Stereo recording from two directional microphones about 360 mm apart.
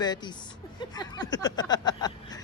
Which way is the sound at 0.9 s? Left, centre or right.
Centre.